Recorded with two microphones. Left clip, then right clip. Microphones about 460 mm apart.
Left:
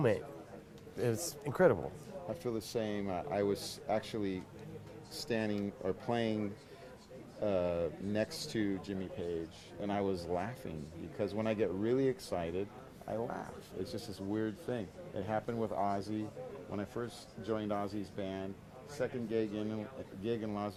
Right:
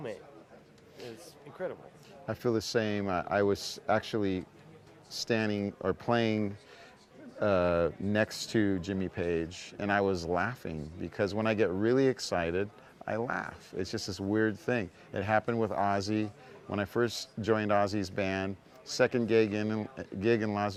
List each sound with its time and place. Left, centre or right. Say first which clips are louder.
1.0 s speech: left 10 dB; left
2.4 s speech: right 9 dB; right
9.8 s speech: right 7 dB; right
16.7 s speech: right 12 dB; right